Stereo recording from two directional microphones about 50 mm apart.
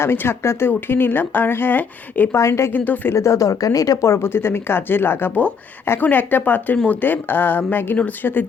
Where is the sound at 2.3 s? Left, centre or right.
Left.